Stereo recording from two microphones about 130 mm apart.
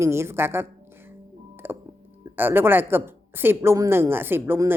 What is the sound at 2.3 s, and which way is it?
Speech, 15° right (ahead or behind).